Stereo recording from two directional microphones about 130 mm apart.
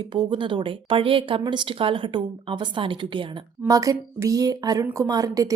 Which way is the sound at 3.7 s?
25° right (ahead or behind).